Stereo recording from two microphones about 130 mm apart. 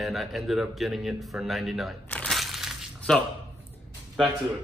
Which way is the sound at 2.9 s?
10° left (ahead or behind).